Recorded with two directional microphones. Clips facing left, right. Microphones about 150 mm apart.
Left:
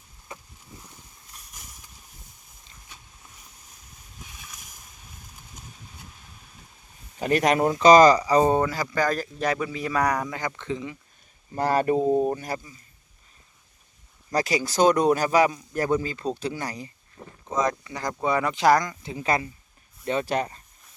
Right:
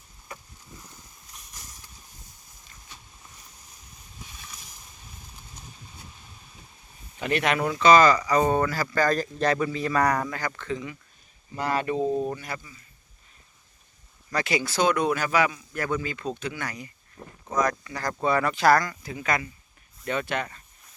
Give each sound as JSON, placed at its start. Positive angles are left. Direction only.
{"t": 0.3, "sound": "a sound", "side_deg": 20}
{"t": 0.9, "sound": "a sound", "side_deg": 5}
{"t": 4.3, "sound": "boat", "side_deg": 5}
{"t": 7.2, "sound": "speech", "side_deg": 40}
{"t": 11.5, "sound": "speech", "side_deg": 45}
{"t": 14.3, "sound": "speech", "side_deg": 40}
{"t": 17.2, "sound": "a sound", "side_deg": 10}
{"t": 17.5, "sound": "speech", "side_deg": 25}
{"t": 19.1, "sound": "speech", "side_deg": 30}